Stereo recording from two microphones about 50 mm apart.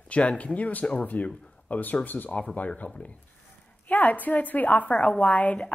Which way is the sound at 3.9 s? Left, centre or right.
Left.